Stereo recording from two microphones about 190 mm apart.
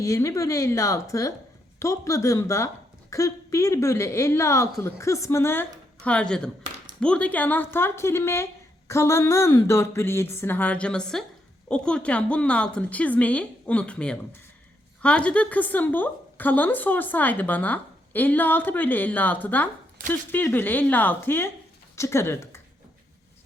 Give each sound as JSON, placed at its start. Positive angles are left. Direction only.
{"t": 0.0, "sound": "a woman's voice", "side_deg": 15}